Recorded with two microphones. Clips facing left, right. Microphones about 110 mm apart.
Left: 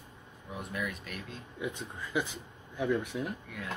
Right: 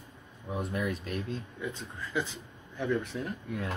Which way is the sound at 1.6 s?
15° left (ahead or behind).